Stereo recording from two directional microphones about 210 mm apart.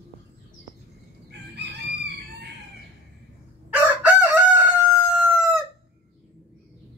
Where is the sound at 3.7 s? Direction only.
5° right (ahead or behind).